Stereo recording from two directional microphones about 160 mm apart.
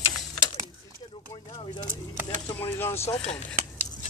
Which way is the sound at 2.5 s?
15° left (ahead or behind).